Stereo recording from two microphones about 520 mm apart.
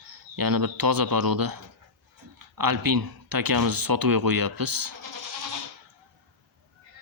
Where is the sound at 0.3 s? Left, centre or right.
Right.